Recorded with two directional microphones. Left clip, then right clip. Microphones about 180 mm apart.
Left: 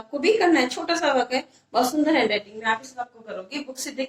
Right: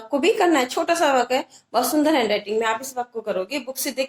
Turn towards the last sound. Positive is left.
turn(degrees=-50)  # may be behind; listen again after turning